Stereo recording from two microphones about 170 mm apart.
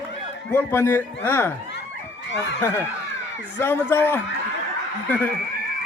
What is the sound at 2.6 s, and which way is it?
Speech, 15° left (ahead or behind).